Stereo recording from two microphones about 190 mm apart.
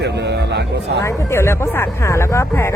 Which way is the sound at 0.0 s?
60° right (ahead or behind).